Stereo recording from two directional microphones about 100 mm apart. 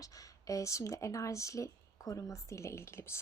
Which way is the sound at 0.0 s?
35° left (ahead or behind).